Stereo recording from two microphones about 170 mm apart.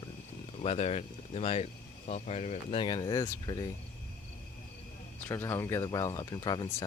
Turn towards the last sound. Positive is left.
turn(degrees=25)  # may be behind; listen again after turning